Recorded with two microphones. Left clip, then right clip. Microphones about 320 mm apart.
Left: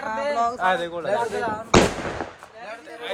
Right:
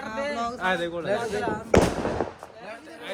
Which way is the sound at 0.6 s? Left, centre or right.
Centre.